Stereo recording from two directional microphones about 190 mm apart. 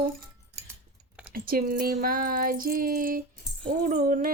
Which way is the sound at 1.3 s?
50° right (ahead or behind).